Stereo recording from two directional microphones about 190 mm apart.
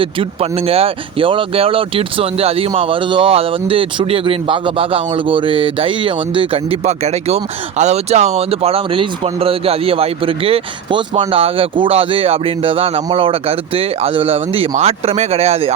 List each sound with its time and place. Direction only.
0.0 s speech: 30° right (ahead or behind)